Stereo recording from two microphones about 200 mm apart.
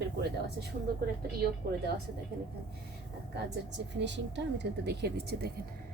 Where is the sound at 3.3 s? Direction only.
60° right (ahead or behind).